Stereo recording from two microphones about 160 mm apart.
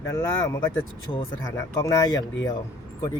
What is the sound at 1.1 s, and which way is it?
Speech, 30° left (ahead or behind).